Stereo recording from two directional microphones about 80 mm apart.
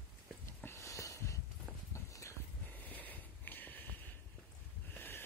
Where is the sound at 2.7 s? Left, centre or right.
Left.